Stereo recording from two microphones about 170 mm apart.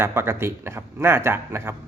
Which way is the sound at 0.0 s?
15° right (ahead or behind).